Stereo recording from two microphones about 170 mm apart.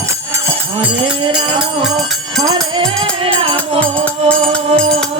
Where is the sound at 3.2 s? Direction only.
35° right (ahead or behind).